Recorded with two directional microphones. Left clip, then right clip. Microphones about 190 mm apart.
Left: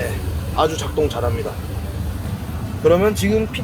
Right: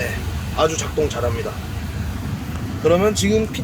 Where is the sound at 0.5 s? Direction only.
Centre (ahead or behind).